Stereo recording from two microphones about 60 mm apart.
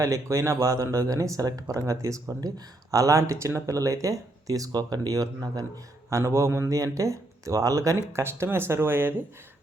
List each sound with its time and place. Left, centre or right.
0.0 s speech: right
6.1 s speech: right
8.2 s speech: right